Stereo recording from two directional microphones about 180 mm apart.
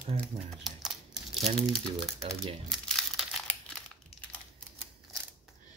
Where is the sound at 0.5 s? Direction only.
Centre (ahead or behind).